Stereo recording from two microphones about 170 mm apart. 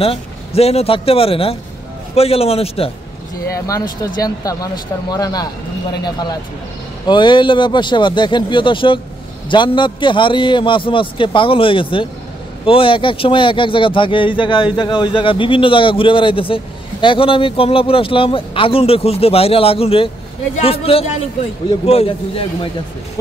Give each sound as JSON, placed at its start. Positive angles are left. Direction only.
{"t": 0.0, "sound": "speech", "side_deg": 35}
{"t": 3.5, "sound": "a man's voice", "side_deg": 20}